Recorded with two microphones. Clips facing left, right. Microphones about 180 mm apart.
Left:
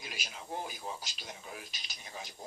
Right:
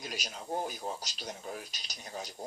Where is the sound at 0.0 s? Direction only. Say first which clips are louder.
Right 5 dB; 40° right (ahead or behind).